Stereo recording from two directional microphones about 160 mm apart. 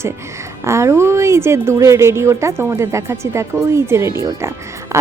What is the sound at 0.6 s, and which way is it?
A woman's voice, 15° right (ahead or behind).